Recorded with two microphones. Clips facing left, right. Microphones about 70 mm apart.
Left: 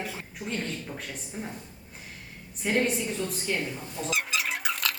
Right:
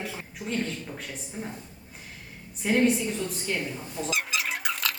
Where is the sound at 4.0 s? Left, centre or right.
Centre.